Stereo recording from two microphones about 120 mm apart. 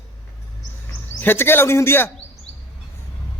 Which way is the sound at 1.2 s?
20° left (ahead or behind).